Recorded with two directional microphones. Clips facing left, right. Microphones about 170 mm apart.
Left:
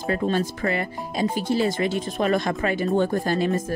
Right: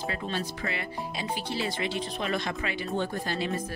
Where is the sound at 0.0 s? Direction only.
45° left (ahead or behind).